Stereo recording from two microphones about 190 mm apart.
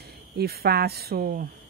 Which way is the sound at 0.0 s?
55° right (ahead or behind).